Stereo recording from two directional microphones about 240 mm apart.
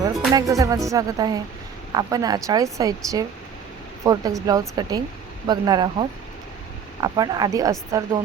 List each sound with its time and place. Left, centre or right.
0.3 s speech: centre